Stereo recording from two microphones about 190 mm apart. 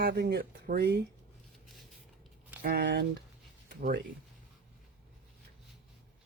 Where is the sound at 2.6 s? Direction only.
55° right (ahead or behind).